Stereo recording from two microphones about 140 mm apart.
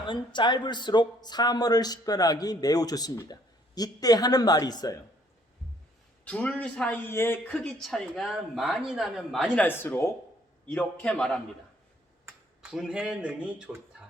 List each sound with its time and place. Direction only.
0.0 s speech: 35° left (ahead or behind)
6.2 s a man's voice: 10° left (ahead or behind)
12.7 s speech: 5° right (ahead or behind)